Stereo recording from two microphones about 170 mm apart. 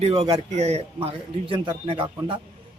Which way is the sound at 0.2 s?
35° right (ahead or behind).